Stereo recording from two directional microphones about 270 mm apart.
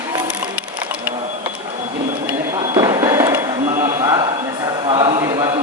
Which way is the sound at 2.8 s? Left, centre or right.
Centre.